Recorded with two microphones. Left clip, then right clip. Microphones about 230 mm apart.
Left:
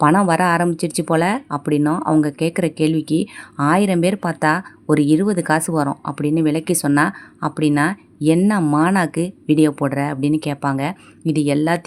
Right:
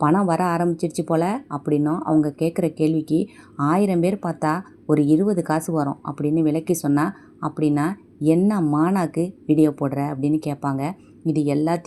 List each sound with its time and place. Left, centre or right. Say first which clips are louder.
0.0 s speech: left 5 dB; left